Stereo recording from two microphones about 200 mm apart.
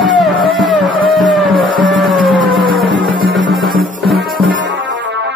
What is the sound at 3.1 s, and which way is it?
Music, 25° right (ahead or behind).